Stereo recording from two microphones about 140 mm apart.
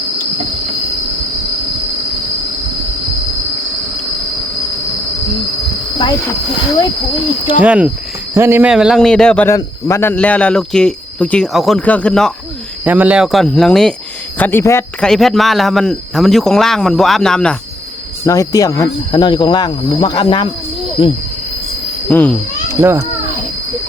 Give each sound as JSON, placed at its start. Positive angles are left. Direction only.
{"t": 7.6, "sound": "speech", "side_deg": -10}
{"t": 8.7, "sound": "speech", "side_deg": -5}
{"t": 9.5, "sound": "speech", "side_deg": 20}
{"t": 12.8, "sound": "speech", "side_deg": -10}
{"t": 14.3, "sound": "speech", "side_deg": 15}
{"t": 15.0, "sound": "speech", "side_deg": 5}
{"t": 18.3, "sound": "speech", "side_deg": 25}
{"t": 22.1, "sound": "speech", "side_deg": 10}
{"t": 22.7, "sound": "a child's voice", "side_deg": -20}